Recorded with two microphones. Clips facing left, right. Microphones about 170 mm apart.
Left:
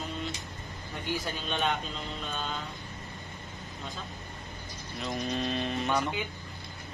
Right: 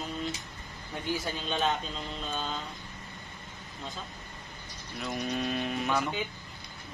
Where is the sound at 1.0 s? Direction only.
Centre (ahead or behind).